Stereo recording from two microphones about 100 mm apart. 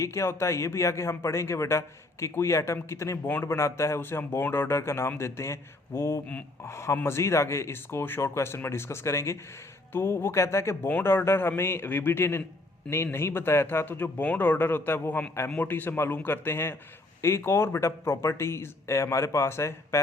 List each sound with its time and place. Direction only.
0.0 s speech: 30° left (ahead or behind)